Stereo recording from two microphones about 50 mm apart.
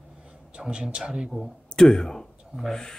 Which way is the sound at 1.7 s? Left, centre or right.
Centre.